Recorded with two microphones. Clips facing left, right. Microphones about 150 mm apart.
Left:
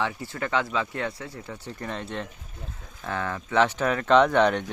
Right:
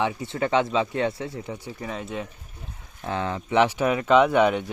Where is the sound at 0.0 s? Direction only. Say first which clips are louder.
Right 4 dB; 20° right (ahead or behind).